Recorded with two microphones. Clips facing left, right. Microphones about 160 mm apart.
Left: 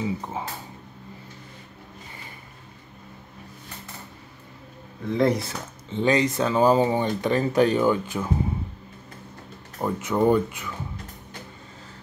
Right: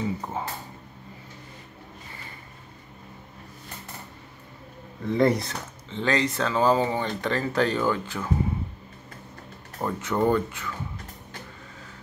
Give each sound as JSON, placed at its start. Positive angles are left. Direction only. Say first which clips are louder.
{"t": 0.2, "sound": "speech", "louder": "even", "side_deg": 5}
{"t": 5.0, "sound": "speech", "louder": "even", "side_deg": 0}
{"t": 5.9, "sound": "speech", "louder": "left 4 dB", "side_deg": 15}
{"t": 9.8, "sound": "speech", "louder": "left 2 dB", "side_deg": 10}